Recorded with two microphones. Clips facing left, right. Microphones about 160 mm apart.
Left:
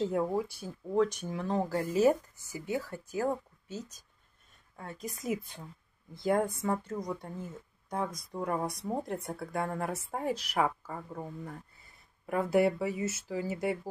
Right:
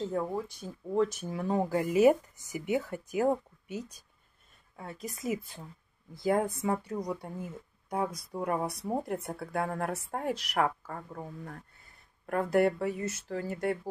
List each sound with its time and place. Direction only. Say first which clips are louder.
0.0 s speech: left 2 dB; 10° left (ahead or behind)
0.9 s speech: even; 5° right (ahead or behind)
4.7 s speech: even; centre (ahead or behind)